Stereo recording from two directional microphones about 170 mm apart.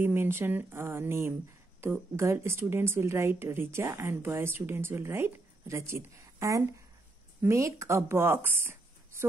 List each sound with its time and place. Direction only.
0.0 s a woman's voice: 15° right (ahead or behind)